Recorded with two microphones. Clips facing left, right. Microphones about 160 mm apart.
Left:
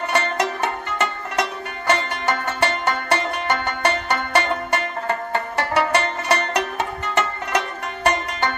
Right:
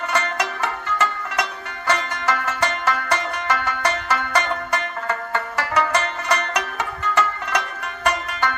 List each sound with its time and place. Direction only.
0.1 s music: 25° left (ahead or behind)